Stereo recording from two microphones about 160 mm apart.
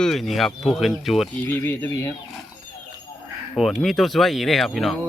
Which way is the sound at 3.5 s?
Centre (ahead or behind).